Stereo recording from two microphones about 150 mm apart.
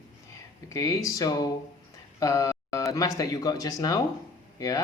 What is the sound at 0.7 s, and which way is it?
Speech, 20° left (ahead or behind).